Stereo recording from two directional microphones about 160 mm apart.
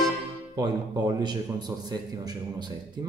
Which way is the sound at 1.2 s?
25° right (ahead or behind).